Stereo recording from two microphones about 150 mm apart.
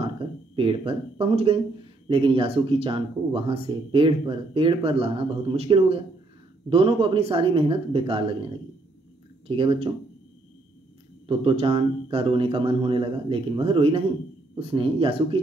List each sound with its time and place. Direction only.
0.6 s speech: 35° right (ahead or behind)
9.6 s speech: 35° right (ahead or behind)
11.2 s speech: 35° right (ahead or behind)